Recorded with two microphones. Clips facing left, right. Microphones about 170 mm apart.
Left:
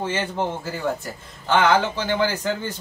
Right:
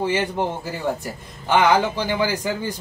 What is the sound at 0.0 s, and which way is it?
A man's voice, 15° right (ahead or behind).